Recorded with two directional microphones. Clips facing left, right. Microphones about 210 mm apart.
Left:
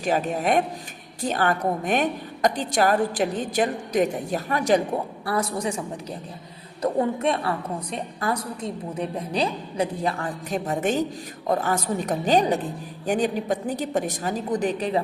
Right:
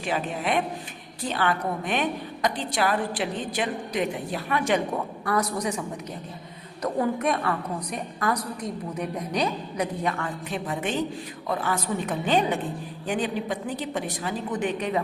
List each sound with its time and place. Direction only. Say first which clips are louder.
0.0 s a woman's voice: left 4 dB; 45° left (ahead or behind)
6.8 s a woman's voice: left 2 dB; 25° left (ahead or behind)